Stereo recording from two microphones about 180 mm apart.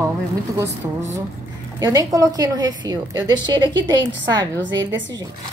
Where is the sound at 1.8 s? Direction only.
20° right (ahead or behind).